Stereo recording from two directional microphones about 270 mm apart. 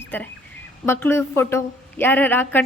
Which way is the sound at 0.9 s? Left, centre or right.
Centre.